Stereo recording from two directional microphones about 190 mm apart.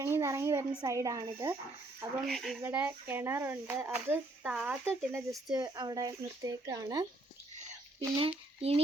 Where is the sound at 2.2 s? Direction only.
Centre (ahead or behind).